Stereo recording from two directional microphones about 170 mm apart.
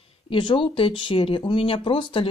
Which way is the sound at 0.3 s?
30° left (ahead or behind).